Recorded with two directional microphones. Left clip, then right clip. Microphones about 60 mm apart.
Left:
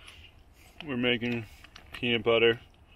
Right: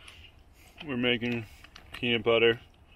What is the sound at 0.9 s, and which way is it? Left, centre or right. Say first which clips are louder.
Speech: even; centre.